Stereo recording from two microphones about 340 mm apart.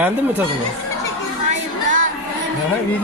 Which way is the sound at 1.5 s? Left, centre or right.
Right.